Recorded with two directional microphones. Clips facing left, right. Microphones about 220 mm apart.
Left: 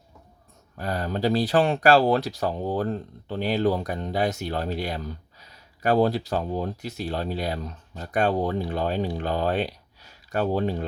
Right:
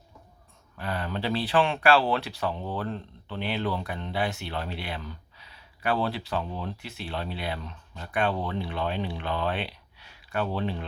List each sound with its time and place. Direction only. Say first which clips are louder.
0.8 s speech: left 5 dB; 40° left (ahead or behind)